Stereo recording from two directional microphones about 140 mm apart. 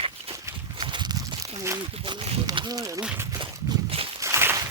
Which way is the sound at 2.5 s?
25° right (ahead or behind).